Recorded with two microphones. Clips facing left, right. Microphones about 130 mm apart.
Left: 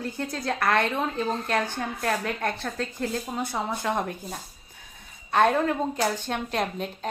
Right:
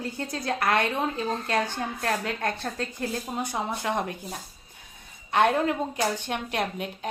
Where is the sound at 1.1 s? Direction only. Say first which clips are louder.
Left 1 dB; 55° left (ahead or behind).